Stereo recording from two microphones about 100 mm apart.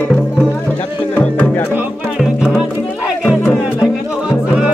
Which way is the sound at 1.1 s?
15° left (ahead or behind).